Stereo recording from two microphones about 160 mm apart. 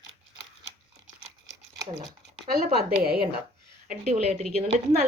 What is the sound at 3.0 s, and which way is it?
Speech, 85° right.